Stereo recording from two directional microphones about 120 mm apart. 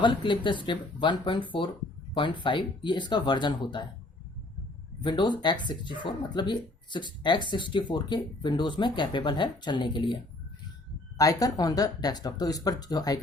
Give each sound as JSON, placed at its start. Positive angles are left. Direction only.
{"t": 0.0, "sound": "speech", "side_deg": 40}
{"t": 5.0, "sound": "speech", "side_deg": 40}
{"t": 11.2, "sound": "speech", "side_deg": 30}